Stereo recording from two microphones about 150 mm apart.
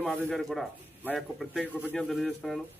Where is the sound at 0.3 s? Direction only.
5° left (ahead or behind).